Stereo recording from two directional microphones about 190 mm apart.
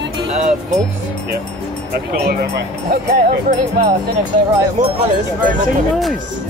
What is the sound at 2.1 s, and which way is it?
Speech, 55° right (ahead or behind).